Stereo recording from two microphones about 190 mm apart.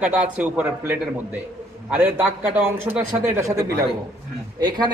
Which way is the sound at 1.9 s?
10° right (ahead or behind).